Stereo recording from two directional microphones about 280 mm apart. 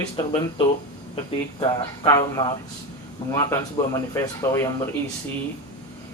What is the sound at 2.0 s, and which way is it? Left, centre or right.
Speech, centre.